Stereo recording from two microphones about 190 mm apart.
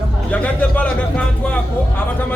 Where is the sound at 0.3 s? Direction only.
5° left (ahead or behind).